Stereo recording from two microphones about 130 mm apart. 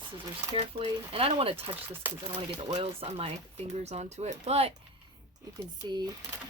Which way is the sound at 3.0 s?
50° right (ahead or behind).